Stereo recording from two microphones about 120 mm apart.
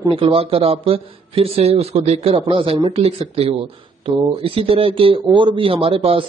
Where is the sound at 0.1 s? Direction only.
55° right (ahead or behind).